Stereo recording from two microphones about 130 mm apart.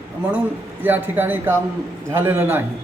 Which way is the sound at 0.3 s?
15° right (ahead or behind).